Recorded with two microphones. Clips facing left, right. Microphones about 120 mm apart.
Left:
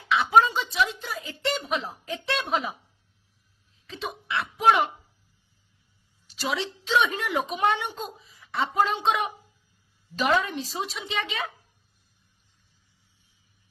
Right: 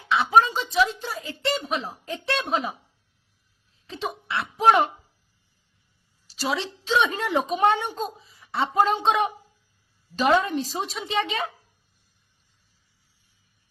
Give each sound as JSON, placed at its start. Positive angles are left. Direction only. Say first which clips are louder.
{"t": 0.1, "sound": "speech", "louder": "right 1 dB", "side_deg": -30}
{"t": 3.8, "sound": "a sound", "louder": "right 3 dB", "side_deg": -35}
{"t": 6.2, "sound": "a woman's voice", "louder": "right 2 dB", "side_deg": -35}